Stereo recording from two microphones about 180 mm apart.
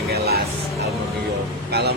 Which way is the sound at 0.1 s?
60° right (ahead or behind).